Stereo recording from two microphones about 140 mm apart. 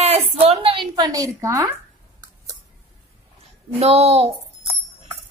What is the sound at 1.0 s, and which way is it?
Speech, 25° right (ahead or behind).